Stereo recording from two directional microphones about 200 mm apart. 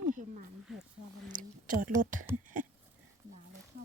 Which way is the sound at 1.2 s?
40° right (ahead or behind).